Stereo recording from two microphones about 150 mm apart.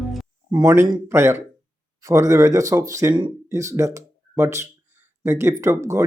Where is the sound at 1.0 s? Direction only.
15° right (ahead or behind).